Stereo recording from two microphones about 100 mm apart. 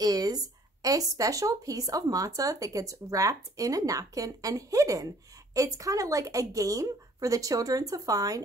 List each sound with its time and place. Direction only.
0.0 s speech: 40° right (ahead or behind)